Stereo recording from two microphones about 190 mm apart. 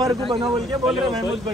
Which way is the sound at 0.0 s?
25° right (ahead or behind).